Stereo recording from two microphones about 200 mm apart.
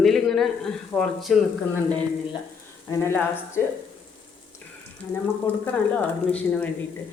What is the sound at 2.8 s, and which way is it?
Speech, 10° left (ahead or behind).